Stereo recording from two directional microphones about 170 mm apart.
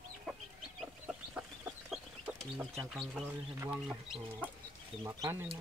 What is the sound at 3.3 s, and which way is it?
Speech, 10° right (ahead or behind).